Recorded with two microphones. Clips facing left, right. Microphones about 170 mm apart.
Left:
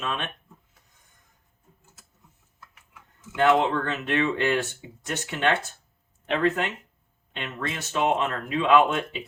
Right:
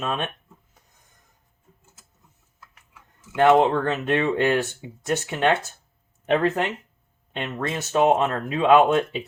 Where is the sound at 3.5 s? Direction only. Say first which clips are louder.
Right 5 dB; 40° right (ahead or behind).